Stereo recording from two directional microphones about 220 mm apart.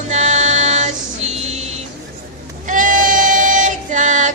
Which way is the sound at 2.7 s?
35° right (ahead or behind).